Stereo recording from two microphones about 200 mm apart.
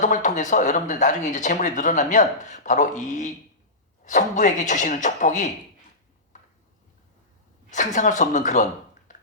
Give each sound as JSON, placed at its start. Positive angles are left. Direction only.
{"t": 0.0, "sound": "speech", "side_deg": 40}
{"t": 7.7, "sound": "speech", "side_deg": 40}